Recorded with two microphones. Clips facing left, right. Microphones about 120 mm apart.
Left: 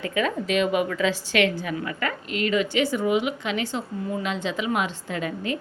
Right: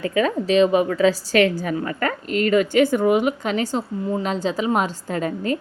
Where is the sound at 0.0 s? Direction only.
35° right (ahead or behind).